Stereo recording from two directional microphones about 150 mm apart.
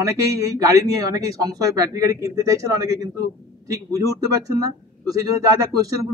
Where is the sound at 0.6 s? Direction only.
20° right (ahead or behind).